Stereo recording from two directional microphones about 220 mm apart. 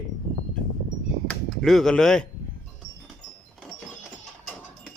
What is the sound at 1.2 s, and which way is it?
Speech, centre (ahead or behind).